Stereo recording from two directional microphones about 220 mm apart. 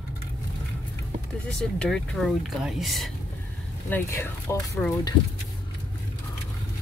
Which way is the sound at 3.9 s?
10° left (ahead or behind).